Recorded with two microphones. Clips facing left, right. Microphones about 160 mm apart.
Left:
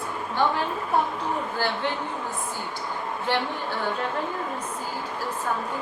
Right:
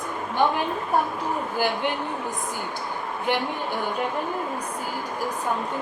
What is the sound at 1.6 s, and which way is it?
Speech, 15° right (ahead or behind).